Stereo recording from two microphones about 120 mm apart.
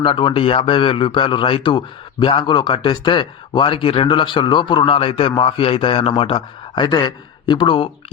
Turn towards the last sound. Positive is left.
turn(degrees=40)  # may be behind; listen again after turning